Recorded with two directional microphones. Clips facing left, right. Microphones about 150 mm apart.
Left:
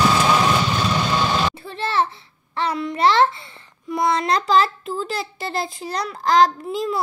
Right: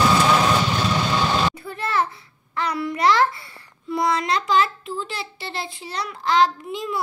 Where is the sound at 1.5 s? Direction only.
25° left (ahead or behind).